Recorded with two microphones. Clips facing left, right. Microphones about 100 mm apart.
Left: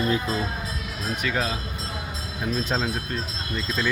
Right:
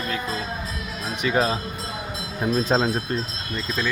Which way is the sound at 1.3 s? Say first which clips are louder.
Right 7 dB; 25° right (ahead or behind).